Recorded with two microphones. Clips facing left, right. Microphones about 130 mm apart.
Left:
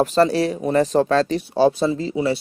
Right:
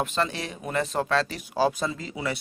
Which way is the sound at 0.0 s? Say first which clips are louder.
Left 11 dB; 35° left (ahead or behind).